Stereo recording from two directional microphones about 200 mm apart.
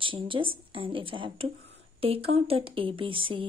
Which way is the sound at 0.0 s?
25° right (ahead or behind).